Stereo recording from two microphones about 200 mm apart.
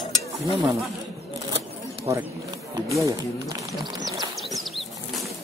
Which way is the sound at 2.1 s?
20° right (ahead or behind).